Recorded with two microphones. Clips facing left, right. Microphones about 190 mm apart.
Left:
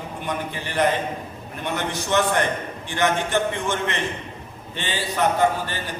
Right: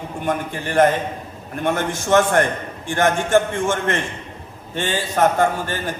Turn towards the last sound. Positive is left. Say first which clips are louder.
# right 1 dB
turn(degrees=-50)  # may be behind; listen again after turning